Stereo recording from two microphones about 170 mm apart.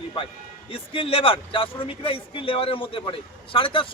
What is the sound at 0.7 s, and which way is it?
Speech, 35° left (ahead or behind).